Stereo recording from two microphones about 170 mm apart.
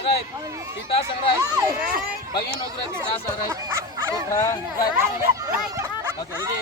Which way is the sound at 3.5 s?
15° right (ahead or behind).